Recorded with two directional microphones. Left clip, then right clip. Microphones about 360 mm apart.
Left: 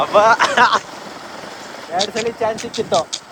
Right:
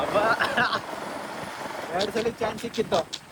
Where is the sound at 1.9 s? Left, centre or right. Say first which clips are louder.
Left 7 dB; centre.